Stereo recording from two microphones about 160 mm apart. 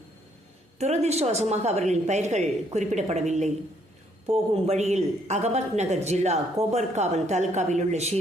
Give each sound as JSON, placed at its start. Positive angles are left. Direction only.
{"t": 0.8, "sound": "a woman's voice", "side_deg": -45}